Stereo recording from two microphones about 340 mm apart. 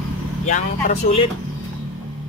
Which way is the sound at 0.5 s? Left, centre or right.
Left.